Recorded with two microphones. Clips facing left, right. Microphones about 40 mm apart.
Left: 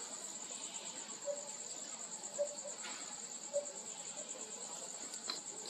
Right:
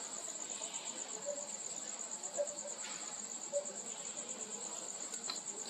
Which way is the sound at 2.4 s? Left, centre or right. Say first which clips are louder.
Even; right.